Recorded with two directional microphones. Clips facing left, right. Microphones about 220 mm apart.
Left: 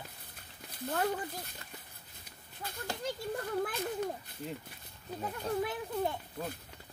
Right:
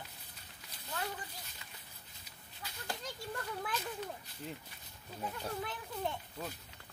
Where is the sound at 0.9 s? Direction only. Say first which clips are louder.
Left 9 dB; 50° left (ahead or behind).